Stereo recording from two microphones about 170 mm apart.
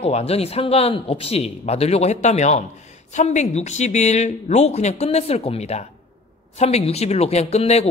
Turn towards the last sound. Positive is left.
turn(degrees=40)  # may be behind; listen again after turning